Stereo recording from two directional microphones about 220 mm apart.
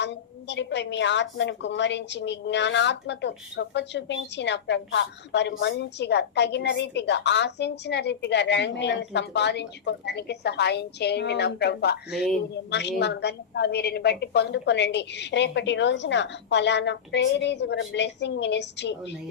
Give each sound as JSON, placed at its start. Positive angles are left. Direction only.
{"t": 0.0, "sound": "a woman's voice", "side_deg": 50}